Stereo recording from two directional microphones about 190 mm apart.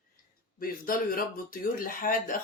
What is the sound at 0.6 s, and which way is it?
Speech, 50° left (ahead or behind).